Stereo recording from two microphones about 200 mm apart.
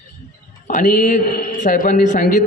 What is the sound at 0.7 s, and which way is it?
A man's voice, 40° left (ahead or behind).